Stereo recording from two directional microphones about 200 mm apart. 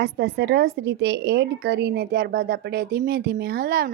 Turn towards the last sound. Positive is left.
turn(degrees=-50)  # may be behind; listen again after turning